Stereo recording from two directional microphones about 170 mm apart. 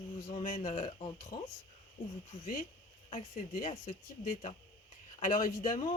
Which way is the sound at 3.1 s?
45° left (ahead or behind).